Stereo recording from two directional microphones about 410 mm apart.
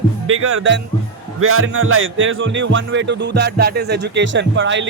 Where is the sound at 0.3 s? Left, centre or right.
Right.